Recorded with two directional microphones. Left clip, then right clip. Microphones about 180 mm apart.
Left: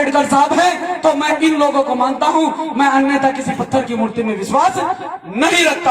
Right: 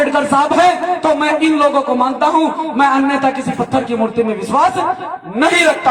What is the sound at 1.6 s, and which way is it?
A man's voice, 20° right (ahead or behind).